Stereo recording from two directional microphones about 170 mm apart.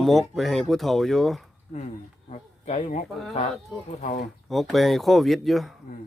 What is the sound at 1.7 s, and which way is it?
Speech, 40° left (ahead or behind).